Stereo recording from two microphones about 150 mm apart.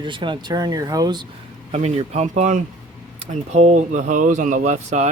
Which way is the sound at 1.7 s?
50° right (ahead or behind).